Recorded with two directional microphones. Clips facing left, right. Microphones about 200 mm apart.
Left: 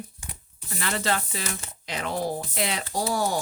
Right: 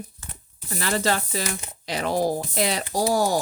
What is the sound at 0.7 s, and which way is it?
Speech, 35° right (ahead or behind).